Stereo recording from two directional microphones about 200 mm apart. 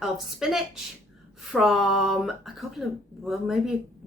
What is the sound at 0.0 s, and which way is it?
Speech, centre (ahead or behind).